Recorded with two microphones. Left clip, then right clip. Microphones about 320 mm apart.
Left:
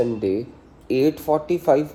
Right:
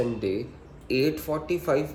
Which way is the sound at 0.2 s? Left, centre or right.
Centre.